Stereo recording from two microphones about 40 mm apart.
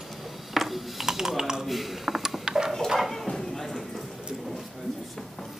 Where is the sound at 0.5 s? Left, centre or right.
Centre.